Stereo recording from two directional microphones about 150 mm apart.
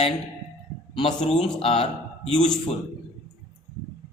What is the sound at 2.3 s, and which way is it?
Speech, 5° left (ahead or behind).